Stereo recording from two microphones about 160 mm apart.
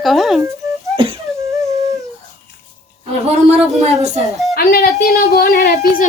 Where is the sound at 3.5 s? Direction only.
45° right (ahead or behind).